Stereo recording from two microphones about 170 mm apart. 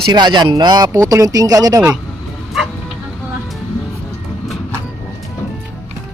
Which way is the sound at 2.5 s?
Centre (ahead or behind).